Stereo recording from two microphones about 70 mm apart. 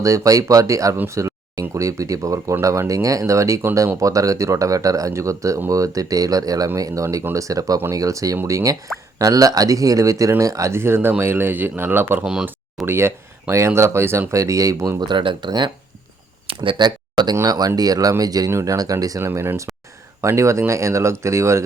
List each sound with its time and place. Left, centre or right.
0.0 s speech: right
12.2 s speech: centre
12.8 s speech: right
15.0 s speech: right
16.7 s speech: right
17.4 s speech: right
18.5 s speech: right
19.2 s speech: right